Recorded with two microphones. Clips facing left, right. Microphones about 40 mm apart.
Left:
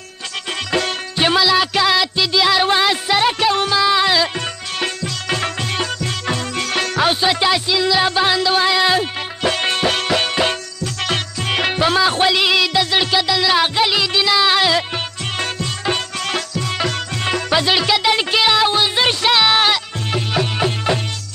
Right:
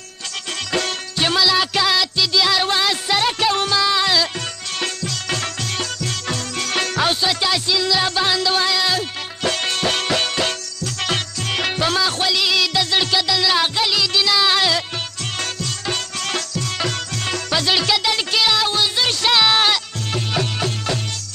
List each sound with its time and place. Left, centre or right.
0.7 s music: centre
19.2 s music: centre